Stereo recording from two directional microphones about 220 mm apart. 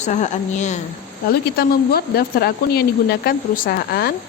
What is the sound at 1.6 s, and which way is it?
Speech, 45° left (ahead or behind).